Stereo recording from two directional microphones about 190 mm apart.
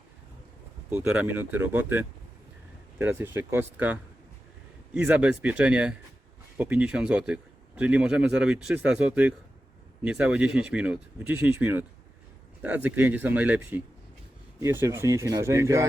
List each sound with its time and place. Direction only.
0.9 s speech: 5° right (ahead or behind)